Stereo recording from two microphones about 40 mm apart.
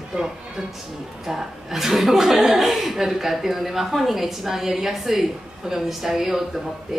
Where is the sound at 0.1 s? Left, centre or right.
Centre.